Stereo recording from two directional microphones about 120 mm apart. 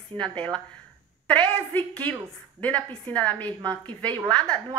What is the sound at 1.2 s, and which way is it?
A woman's voice, 10° left (ahead or behind).